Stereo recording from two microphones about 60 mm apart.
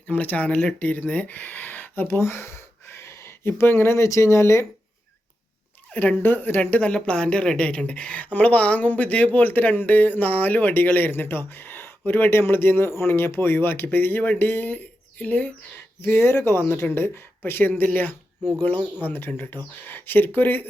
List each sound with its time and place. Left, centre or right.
0.1 s speech: left
5.9 s speech: left
6.2 s a woman's voice: left
16.0 s speech: left